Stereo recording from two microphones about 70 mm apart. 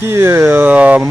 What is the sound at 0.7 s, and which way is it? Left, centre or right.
Speech, centre.